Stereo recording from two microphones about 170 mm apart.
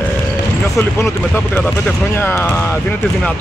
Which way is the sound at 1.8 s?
15° left (ahead or behind).